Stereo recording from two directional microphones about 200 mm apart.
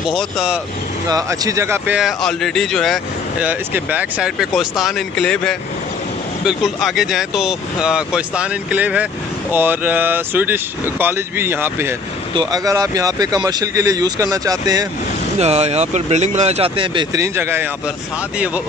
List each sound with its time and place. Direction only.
0.1 s speech: centre (ahead or behind)
1.0 s speech: 20° right (ahead or behind)
15.3 s speech: 35° right (ahead or behind); by 17.6 s 10° right (ahead or behind)